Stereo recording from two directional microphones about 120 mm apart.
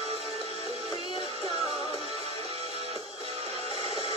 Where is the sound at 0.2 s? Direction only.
55° left (ahead or behind).